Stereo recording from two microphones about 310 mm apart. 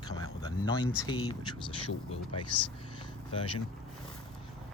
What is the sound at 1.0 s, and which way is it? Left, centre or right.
Speech, centre.